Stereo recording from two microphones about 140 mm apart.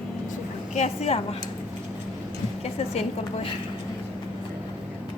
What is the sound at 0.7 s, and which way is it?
Speech, 50° left (ahead or behind).